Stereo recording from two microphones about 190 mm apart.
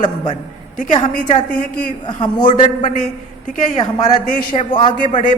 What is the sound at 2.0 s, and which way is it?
Speech, 25° left (ahead or behind).